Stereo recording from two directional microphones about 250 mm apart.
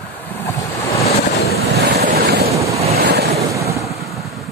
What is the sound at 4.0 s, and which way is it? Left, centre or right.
Waves, centre.